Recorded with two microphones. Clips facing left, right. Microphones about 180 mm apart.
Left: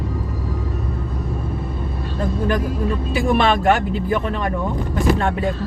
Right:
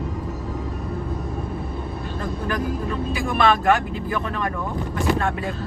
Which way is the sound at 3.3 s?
25° left (ahead or behind).